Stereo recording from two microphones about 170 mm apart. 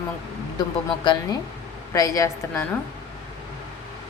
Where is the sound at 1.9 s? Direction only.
20° left (ahead or behind).